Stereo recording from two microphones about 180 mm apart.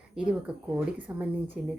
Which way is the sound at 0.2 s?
5° right (ahead or behind).